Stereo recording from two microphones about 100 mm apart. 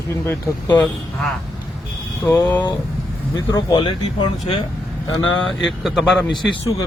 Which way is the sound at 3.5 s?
45° left (ahead or behind).